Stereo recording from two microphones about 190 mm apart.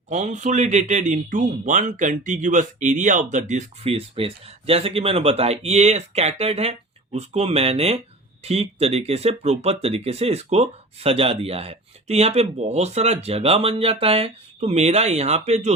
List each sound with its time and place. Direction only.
0.1 s speech: 40° right (ahead or behind)